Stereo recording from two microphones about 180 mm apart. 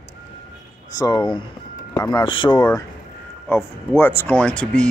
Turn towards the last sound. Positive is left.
turn(degrees=5)  # may be behind; listen again after turning